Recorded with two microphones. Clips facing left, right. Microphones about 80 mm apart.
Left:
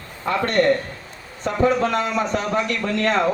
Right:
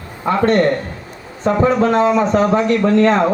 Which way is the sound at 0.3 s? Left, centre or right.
Right.